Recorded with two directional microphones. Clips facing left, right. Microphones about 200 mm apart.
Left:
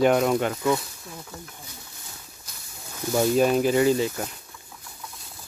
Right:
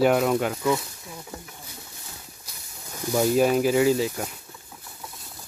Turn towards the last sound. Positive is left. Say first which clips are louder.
# even
turn(degrees=-5)  # may be behind; listen again after turning